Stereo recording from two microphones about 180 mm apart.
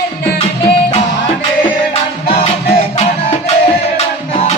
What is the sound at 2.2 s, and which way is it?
Music, 30° left (ahead or behind).